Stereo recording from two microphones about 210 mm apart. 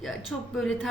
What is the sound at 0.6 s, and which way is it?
Speech, centre (ahead or behind).